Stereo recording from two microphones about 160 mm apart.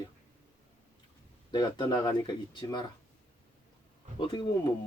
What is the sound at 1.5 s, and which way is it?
Speech, 25° left (ahead or behind).